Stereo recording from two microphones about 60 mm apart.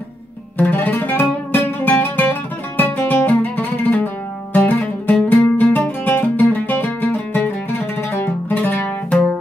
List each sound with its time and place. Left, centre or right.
0.6 s music: left